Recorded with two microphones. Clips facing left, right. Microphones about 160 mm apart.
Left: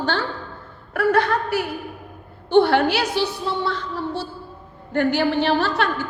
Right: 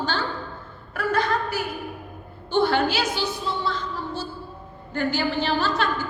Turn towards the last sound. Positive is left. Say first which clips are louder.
# left 2 dB
turn(degrees=65)  # may be behind; listen again after turning